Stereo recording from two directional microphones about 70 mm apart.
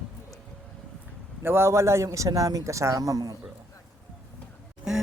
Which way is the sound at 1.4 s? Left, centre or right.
Right.